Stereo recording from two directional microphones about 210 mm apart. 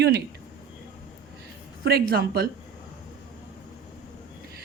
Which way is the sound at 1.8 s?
50° right (ahead or behind).